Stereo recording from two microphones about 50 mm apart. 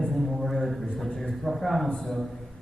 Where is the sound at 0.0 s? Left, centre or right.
Centre.